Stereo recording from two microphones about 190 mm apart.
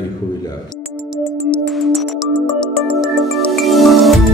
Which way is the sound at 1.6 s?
Centre (ahead or behind).